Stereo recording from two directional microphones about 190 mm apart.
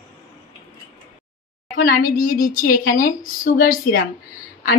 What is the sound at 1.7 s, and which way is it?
A woman's voice, 50° left (ahead or behind).